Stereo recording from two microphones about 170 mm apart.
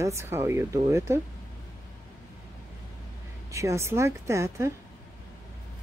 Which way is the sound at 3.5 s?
15° right (ahead or behind).